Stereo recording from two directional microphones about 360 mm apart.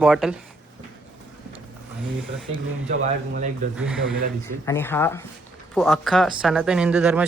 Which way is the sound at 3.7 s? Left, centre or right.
Centre.